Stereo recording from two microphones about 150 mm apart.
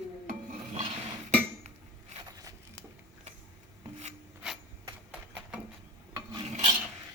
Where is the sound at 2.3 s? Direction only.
25° right (ahead or behind).